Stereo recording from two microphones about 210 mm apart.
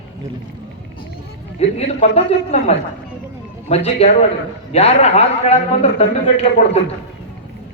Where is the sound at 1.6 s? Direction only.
30° left (ahead or behind).